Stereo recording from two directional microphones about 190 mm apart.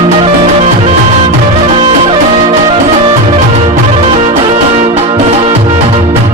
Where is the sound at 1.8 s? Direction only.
35° right (ahead or behind).